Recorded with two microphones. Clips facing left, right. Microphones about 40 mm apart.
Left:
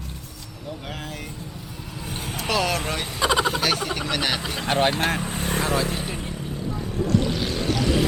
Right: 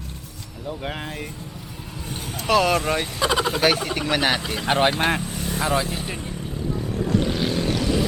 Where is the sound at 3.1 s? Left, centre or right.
Centre.